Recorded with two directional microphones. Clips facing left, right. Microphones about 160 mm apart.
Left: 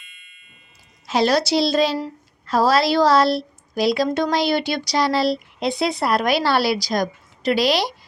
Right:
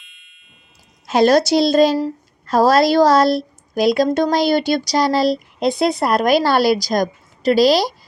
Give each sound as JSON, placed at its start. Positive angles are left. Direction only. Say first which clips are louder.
{"t": 0.0, "sound": "ding", "louder": "left 2 dB", "side_deg": 0}
{"t": 1.0, "sound": "a woman's voice", "louder": "right 5 dB", "side_deg": -50}